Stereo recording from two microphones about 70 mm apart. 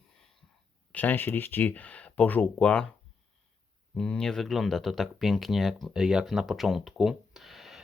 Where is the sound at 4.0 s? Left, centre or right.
Centre.